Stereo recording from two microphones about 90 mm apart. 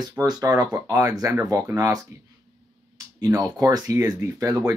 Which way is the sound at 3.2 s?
40° right (ahead or behind).